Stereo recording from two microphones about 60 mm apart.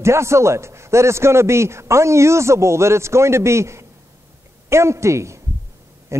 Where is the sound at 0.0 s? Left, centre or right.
Right.